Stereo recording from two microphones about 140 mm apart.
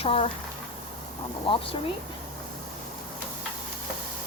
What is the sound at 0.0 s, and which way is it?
Speech, 45° left (ahead or behind).